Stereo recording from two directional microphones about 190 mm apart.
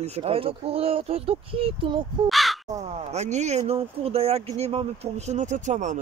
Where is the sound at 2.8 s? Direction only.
35° right (ahead or behind).